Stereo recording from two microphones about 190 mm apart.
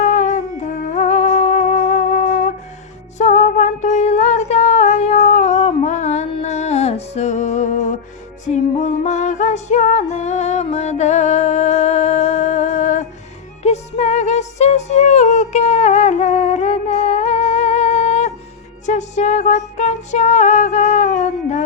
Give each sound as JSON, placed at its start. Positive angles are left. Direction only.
{"t": 0.0, "sound": "humming", "side_deg": 40}
{"t": 0.9, "sound": "music", "side_deg": 40}